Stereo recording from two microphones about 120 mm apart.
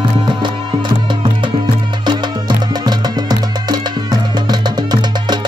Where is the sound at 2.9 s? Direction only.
35° right (ahead or behind).